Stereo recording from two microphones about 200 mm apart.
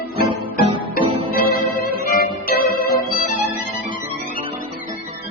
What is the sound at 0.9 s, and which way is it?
Music, 45° left (ahead or behind).